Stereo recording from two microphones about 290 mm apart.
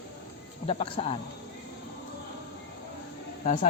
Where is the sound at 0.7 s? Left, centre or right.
Centre.